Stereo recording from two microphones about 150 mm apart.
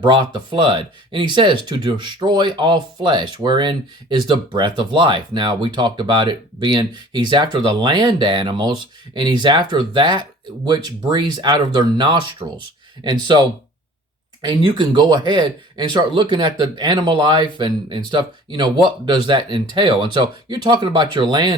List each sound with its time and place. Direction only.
0.0 s speech: 35° right (ahead or behind)
14.4 s speech: 30° right (ahead or behind)